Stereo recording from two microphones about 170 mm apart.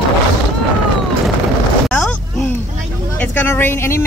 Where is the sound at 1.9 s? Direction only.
5° left (ahead or behind).